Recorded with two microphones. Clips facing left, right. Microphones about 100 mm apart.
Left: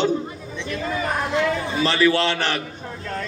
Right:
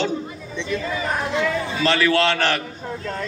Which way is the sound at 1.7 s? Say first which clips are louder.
Even; 15° left (ahead or behind).